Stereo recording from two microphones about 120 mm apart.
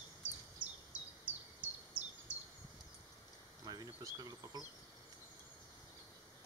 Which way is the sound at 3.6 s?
30° right (ahead or behind).